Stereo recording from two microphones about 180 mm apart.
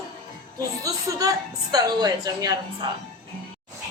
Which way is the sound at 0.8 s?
20° right (ahead or behind).